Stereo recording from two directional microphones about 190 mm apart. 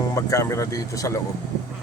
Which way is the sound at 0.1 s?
15° left (ahead or behind).